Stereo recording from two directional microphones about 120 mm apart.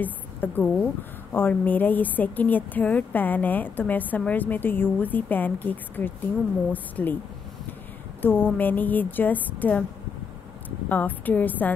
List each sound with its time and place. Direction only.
0.0 s a woman's voice: 15° left (ahead or behind)
8.2 s a woman's voice: 15° left (ahead or behind)
10.9 s a woman's voice: 15° left (ahead or behind)